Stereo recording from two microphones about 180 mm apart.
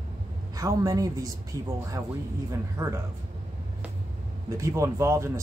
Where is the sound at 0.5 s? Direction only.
20° right (ahead or behind).